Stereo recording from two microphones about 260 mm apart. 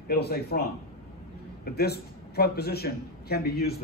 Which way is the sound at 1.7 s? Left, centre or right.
Left.